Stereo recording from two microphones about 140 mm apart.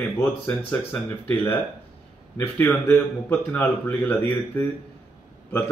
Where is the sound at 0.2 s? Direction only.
15° left (ahead or behind).